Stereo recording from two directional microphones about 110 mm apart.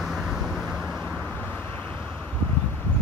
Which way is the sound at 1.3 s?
15° left (ahead or behind).